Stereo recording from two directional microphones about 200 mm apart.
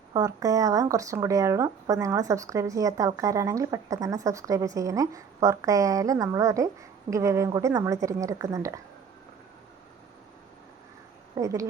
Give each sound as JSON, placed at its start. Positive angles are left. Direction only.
{"t": 0.1, "sound": "speech", "side_deg": -20}
{"t": 11.3, "sound": "speech", "side_deg": -15}